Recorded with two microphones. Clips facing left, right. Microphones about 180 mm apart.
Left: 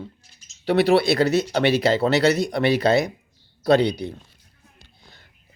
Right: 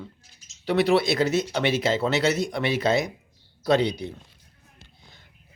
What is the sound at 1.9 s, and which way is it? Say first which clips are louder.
Speech: left 4 dB; 35° left (ahead or behind).